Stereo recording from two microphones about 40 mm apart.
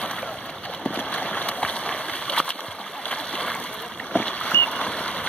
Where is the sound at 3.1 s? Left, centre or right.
Left.